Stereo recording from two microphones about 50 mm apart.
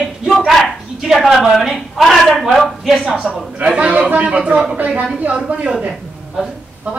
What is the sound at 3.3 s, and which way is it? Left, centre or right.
A man's voice, right.